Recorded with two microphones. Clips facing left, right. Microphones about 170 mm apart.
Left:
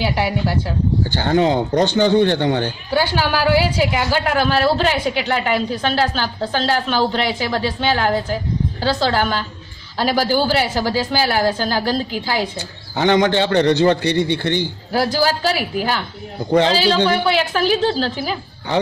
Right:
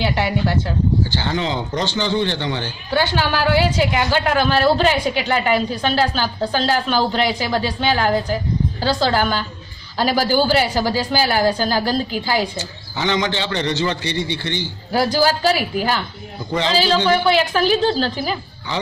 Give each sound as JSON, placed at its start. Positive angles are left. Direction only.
{"t": 0.0, "sound": "a woman's voice", "side_deg": 10}
{"t": 1.1, "sound": "speech", "side_deg": 50}
{"t": 2.9, "sound": "a woman's voice", "side_deg": 10}
{"t": 12.5, "sound": "a man's voice", "side_deg": 55}
{"t": 14.9, "sound": "speech", "side_deg": 0}